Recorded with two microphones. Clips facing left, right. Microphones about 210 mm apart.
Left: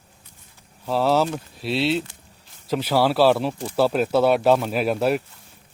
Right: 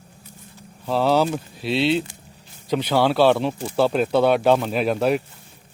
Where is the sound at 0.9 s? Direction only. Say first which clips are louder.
Right 1 dB; centre (ahead or behind).